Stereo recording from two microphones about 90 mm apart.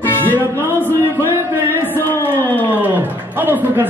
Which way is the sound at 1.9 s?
25° left (ahead or behind).